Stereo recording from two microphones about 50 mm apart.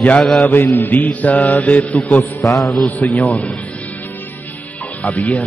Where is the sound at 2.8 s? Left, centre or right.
Left.